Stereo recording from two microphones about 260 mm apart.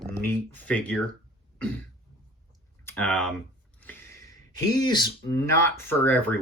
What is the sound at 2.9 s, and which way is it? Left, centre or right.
Speech, centre.